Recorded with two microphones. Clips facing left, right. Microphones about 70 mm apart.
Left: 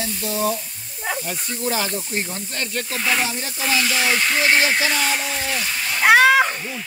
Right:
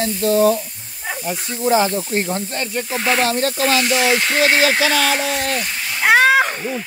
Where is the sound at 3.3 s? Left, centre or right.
Right.